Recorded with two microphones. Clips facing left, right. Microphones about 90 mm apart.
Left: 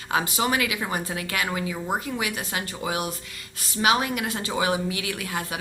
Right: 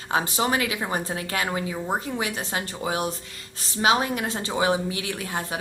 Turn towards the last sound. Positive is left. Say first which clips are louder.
# right 1 dB
turn(degrees=-30)  # may be behind; listen again after turning